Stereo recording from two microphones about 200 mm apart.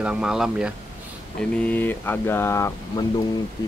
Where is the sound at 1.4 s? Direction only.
5° left (ahead or behind).